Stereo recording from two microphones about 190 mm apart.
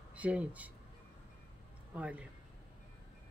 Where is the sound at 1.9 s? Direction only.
5° right (ahead or behind).